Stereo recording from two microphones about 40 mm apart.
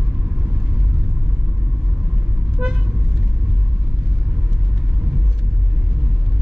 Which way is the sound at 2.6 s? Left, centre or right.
Right.